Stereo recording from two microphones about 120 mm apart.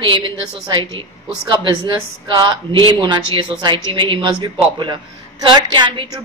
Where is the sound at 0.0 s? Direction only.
40° right (ahead or behind).